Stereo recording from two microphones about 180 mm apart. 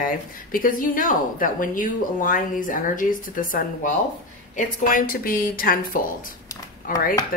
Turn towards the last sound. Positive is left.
turn(degrees=50)  # may be behind; listen again after turning